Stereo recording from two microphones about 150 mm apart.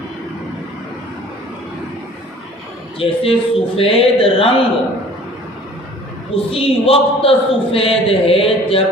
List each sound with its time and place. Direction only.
3.0 s a man's voice: 40° left (ahead or behind)
6.3 s a man's voice: 40° left (ahead or behind)